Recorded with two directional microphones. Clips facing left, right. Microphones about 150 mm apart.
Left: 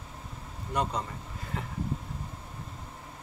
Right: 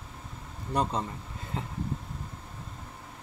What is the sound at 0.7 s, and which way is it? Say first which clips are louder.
Speech: right 2 dB; 35° right (ahead or behind).